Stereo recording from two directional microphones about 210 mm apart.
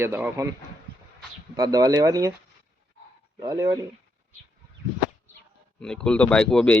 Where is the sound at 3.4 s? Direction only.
15° right (ahead or behind).